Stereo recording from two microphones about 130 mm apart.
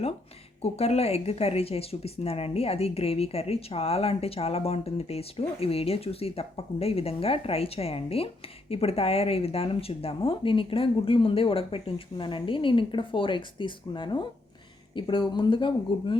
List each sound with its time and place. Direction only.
0.6 s speech: 50° left (ahead or behind)